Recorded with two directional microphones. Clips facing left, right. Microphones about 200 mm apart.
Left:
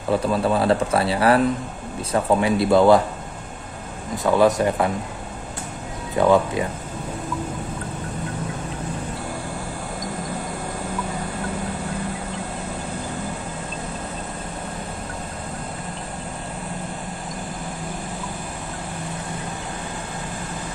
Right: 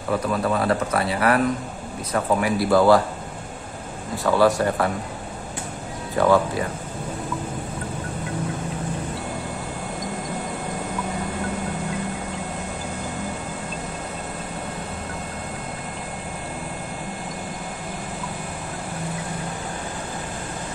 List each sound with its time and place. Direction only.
0.1 s speech: 30° left (ahead or behind)
4.2 s speech: 20° left (ahead or behind)
6.1 s speech: 20° left (ahead or behind)